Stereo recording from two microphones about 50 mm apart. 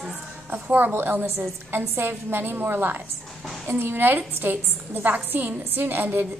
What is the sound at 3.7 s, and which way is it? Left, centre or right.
A woman's voice, right.